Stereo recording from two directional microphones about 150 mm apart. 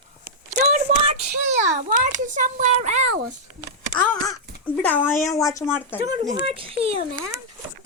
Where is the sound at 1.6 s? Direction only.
55° right (ahead or behind).